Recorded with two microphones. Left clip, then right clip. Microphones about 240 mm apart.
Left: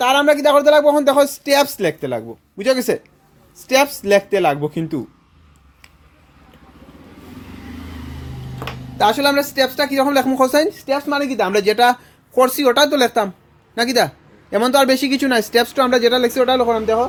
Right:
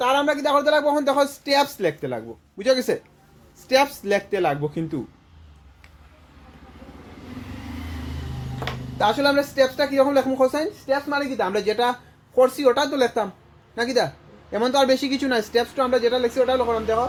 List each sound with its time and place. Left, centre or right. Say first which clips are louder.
0.0 s speech: left 7 dB; left
9.0 s a man's voice: left 4 dB; left